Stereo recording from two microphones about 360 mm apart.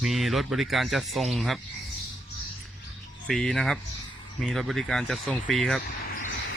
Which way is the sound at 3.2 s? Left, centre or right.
Centre.